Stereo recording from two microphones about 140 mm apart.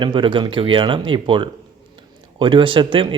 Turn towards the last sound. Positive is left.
turn(degrees=-35)  # may be behind; listen again after turning